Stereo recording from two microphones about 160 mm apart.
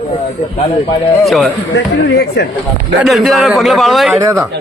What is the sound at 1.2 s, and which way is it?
Speech, centre (ahead or behind).